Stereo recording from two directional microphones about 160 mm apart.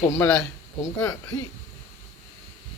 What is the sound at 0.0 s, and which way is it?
Speech, 20° left (ahead or behind).